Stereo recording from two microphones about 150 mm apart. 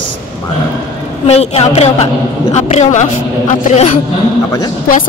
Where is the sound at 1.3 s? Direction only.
45° left (ahead or behind).